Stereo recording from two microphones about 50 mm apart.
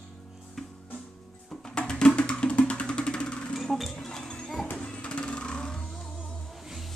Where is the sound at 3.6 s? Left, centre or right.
Centre.